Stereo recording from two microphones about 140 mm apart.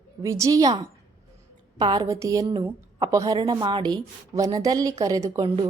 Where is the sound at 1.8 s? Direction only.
30° right (ahead or behind).